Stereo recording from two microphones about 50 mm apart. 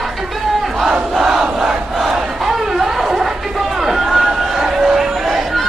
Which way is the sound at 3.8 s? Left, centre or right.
Centre.